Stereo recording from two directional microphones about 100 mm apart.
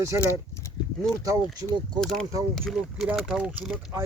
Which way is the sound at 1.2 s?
35° right (ahead or behind).